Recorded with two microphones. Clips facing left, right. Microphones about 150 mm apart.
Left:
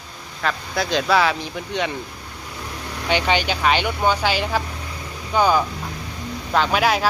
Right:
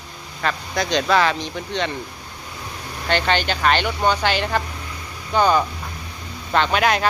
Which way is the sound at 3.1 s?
10° left (ahead or behind).